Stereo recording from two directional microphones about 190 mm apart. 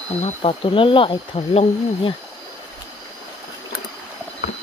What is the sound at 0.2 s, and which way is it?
Speech, 30° left (ahead or behind).